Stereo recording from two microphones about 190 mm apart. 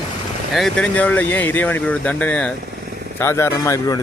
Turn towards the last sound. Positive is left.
turn(degrees=20)  # may be behind; listen again after turning